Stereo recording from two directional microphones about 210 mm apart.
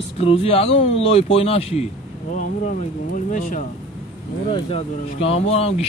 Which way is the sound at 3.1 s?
40° left (ahead or behind).